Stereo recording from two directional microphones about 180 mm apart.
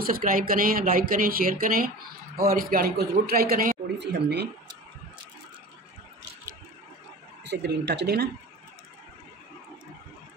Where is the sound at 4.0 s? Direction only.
70° right (ahead or behind).